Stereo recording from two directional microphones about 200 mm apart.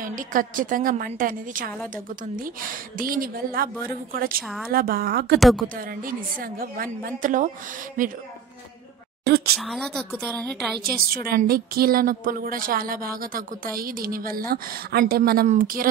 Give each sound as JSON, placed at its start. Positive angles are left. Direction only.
{"t": 0.0, "sound": "a woman's voice", "side_deg": -45}
{"t": 5.4, "sound": "a woman's voice", "side_deg": 0}
{"t": 6.0, "sound": "a woman's voice", "side_deg": -45}
{"t": 9.2, "sound": "a sound", "side_deg": -50}
{"t": 9.6, "sound": "a woman's voice", "side_deg": 0}
{"t": 10.8, "sound": "a woman's voice", "side_deg": -50}